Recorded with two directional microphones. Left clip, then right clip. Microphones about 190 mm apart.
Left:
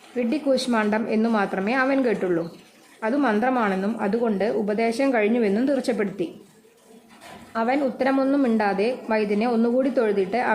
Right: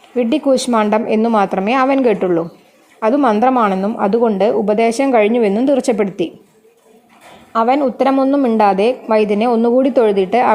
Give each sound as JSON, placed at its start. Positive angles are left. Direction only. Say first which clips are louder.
{"t": 0.2, "sound": "a woman's voice", "louder": "right 8 dB", "side_deg": -40}
{"t": 7.5, "sound": "a woman's voice", "louder": "right 9 dB", "side_deg": -35}